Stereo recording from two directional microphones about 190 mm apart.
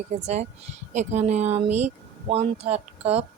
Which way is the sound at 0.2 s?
35° right (ahead or behind).